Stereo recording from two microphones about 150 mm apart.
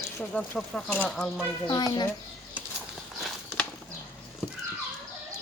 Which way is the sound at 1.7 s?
25° left (ahead or behind).